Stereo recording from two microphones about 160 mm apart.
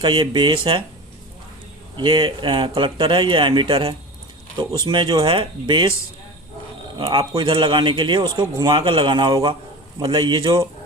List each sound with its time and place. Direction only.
0.0 s speech: 30° right (ahead or behind)
2.0 s speech: 30° right (ahead or behind)
7.0 s a man's voice: 30° right (ahead or behind)